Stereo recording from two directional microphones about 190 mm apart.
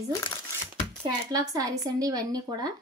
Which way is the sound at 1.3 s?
20° right (ahead or behind).